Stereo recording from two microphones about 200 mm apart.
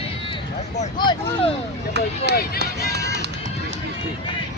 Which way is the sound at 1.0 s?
20° left (ahead or behind).